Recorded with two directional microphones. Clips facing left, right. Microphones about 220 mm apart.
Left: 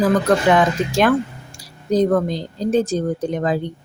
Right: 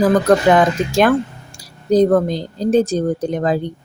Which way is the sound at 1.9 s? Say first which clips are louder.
Right 4 dB; 35° right (ahead or behind).